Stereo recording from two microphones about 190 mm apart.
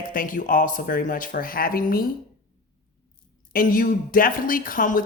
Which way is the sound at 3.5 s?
50° left (ahead or behind).